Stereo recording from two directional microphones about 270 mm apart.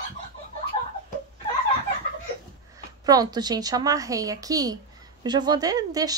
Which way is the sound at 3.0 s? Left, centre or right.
Centre.